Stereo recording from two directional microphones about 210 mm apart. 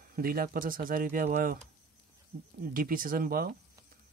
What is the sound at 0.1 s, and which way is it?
Speech, 45° right (ahead or behind).